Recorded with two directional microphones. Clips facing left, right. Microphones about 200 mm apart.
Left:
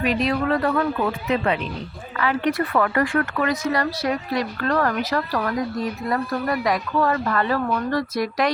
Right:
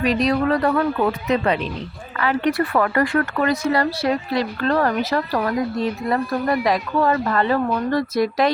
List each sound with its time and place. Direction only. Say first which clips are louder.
0.0 s speech: right 3 dB; 35° right (ahead or behind)
2.2 s a woman's voice: right 2 dB; 35° right (ahead or behind)